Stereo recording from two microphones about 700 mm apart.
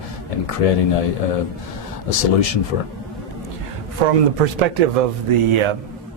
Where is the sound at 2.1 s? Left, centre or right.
Left.